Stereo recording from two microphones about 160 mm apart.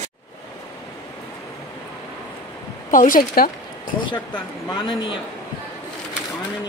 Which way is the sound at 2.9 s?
60° left (ahead or behind).